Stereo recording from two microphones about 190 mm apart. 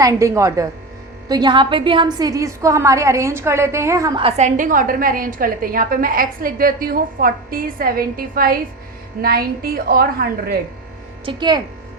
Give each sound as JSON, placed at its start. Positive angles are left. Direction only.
{"t": 0.0, "sound": "a woman's voice", "side_deg": -15}
{"t": 4.2, "sound": "a woman's voice", "side_deg": -35}
{"t": 11.3, "sound": "a woman's voice", "side_deg": -25}